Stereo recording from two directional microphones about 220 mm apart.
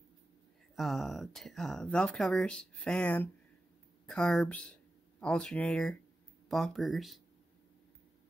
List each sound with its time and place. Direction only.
0.7 s speech: centre (ahead or behind)